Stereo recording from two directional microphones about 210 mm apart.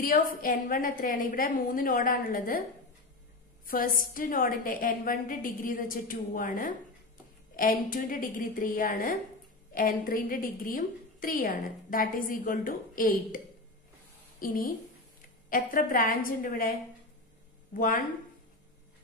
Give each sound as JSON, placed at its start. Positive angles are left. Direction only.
{"t": 0.0, "sound": "a woman's voice", "side_deg": 40}
{"t": 3.6, "sound": "a woman's voice", "side_deg": 45}
{"t": 14.4, "sound": "a woman's voice", "side_deg": 40}
{"t": 17.7, "sound": "a woman's voice", "side_deg": 40}